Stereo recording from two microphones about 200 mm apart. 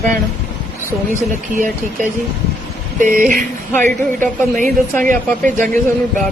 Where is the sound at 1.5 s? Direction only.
40° right (ahead or behind).